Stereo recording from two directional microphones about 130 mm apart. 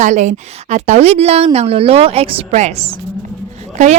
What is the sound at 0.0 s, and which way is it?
A woman's voice, 70° right (ahead or behind).